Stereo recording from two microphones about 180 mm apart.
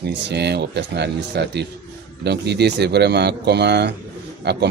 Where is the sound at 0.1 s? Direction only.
70° right (ahead or behind).